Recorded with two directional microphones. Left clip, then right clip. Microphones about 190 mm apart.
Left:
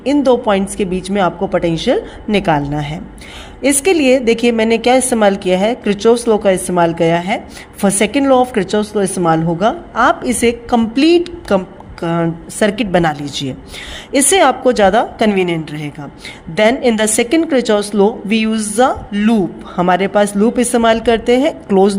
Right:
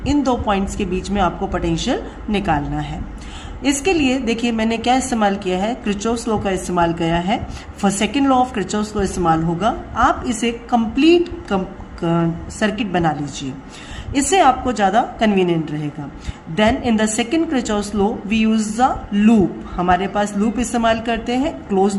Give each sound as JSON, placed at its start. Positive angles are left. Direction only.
{"t": 0.0, "sound": "a woman's voice", "side_deg": 30}